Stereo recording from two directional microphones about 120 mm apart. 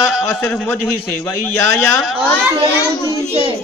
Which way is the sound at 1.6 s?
20° left (ahead or behind).